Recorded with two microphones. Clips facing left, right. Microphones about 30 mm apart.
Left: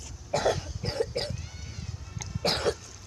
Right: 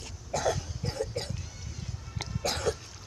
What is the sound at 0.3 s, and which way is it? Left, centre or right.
Cough, left.